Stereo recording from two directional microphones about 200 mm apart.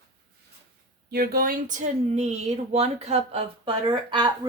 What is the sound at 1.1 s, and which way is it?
Speech, 50° right (ahead or behind).